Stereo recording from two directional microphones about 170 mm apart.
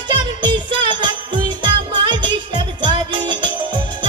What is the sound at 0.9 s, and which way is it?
Music, 30° right (ahead or behind).